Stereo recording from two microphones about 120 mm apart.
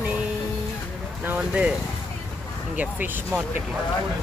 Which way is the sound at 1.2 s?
10° right (ahead or behind).